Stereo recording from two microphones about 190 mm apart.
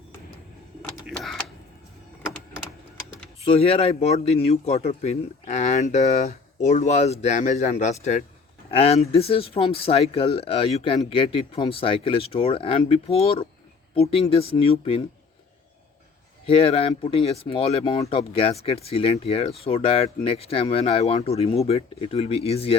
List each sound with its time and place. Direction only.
1.0 s printer: centre (ahead or behind)
3.4 s a man's voice: 30° left (ahead or behind)
16.5 s a man's voice: 30° left (ahead or behind)